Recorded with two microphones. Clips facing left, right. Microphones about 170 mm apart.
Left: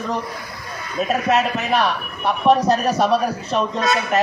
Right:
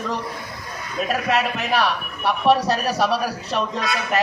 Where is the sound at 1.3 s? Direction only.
Centre (ahead or behind).